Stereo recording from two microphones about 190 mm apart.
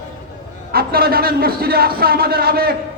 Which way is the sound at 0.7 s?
55° right (ahead or behind).